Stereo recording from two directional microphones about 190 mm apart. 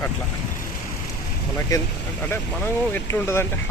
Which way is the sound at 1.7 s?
20° left (ahead or behind).